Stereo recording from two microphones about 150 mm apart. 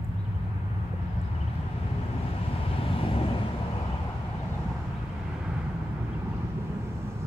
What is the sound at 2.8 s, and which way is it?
Vehicle, 35° left (ahead or behind).